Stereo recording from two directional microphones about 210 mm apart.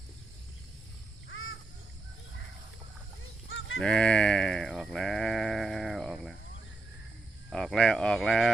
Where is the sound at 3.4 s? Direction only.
75° left (ahead or behind).